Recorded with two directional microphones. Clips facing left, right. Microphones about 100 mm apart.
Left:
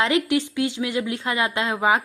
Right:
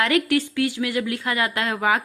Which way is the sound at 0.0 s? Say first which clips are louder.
Even; 20° left (ahead or behind).